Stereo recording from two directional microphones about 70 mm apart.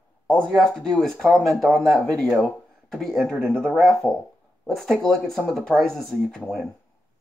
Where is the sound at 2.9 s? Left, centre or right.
Centre.